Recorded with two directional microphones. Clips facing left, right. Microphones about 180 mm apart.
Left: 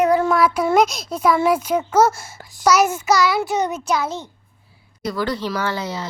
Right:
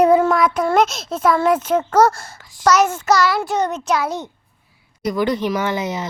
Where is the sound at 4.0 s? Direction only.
15° right (ahead or behind).